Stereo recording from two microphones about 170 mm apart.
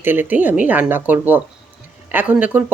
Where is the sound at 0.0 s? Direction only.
10° right (ahead or behind).